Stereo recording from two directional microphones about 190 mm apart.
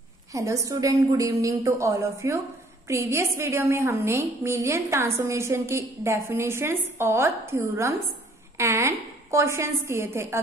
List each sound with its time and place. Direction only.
0.3 s a woman's voice: 15° right (ahead or behind)